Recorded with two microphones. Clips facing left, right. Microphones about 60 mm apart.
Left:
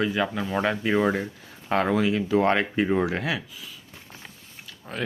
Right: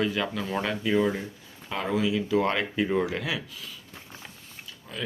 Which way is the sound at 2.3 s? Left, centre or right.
Left.